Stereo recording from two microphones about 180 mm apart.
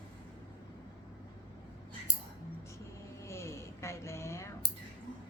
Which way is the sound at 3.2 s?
15° left (ahead or behind).